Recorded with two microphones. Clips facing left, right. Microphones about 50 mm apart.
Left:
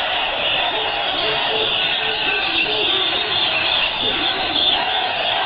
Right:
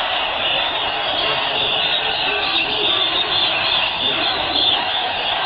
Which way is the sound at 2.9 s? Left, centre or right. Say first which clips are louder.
Right 1 dB; left.